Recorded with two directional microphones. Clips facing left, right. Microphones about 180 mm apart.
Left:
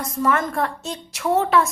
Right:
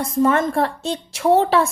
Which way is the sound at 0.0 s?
30° right (ahead or behind).